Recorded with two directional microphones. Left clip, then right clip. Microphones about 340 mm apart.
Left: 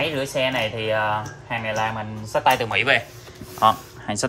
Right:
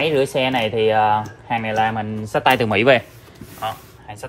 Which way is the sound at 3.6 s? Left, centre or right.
Left.